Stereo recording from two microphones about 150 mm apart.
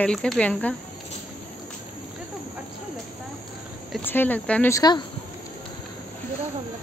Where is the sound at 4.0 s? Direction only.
15° left (ahead or behind).